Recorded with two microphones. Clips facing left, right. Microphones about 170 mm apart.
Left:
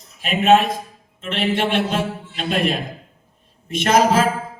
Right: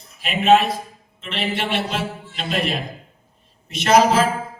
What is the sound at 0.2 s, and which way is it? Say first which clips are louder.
Speech: left 1 dB; 45° left (ahead or behind).